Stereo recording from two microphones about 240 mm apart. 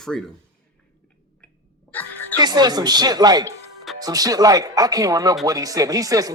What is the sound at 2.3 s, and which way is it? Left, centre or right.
Speech, centre.